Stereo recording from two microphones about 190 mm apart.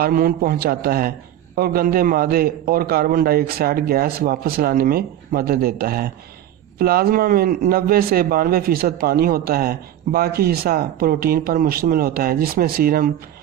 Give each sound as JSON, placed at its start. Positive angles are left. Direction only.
{"t": 0.0, "sound": "speech", "side_deg": -50}